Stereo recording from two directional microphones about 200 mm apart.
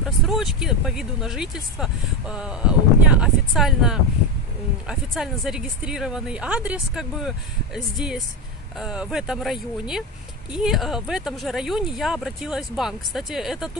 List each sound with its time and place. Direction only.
0.0 s speech: centre (ahead or behind)